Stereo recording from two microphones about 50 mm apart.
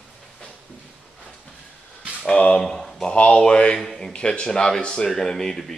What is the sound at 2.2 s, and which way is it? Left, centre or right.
Speech, left.